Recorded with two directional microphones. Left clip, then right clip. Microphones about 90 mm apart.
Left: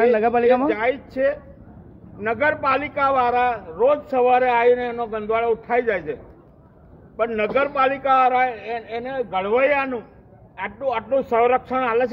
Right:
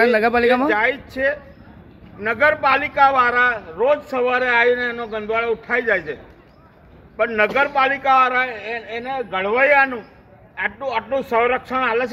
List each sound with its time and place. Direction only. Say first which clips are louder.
0.0 s speech: right 2 dB; 40° right (ahead or behind)
0.7 s a man's voice: right 3 dB; 10° right (ahead or behind)
7.2 s a man's voice: right 3 dB; 10° right (ahead or behind)